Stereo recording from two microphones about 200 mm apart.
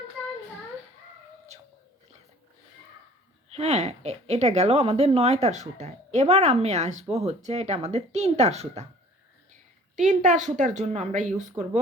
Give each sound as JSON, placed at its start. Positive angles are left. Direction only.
{"t": 3.5, "sound": "a woman's voice", "side_deg": -30}